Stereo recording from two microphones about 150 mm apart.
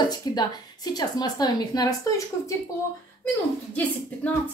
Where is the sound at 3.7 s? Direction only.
10° left (ahead or behind).